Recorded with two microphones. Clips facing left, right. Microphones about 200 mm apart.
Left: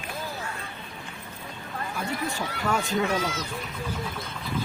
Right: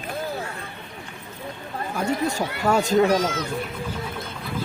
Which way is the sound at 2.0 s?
40° right (ahead or behind).